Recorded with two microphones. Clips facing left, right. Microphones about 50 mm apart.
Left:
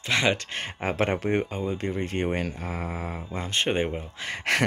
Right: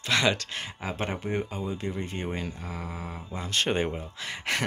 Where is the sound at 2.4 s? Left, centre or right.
Left.